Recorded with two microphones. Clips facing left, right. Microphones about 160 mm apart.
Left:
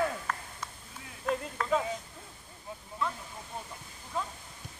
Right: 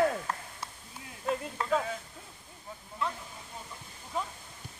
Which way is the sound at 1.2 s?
Centre (ahead or behind).